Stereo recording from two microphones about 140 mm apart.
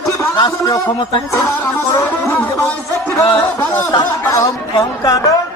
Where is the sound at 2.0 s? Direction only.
15° left (ahead or behind).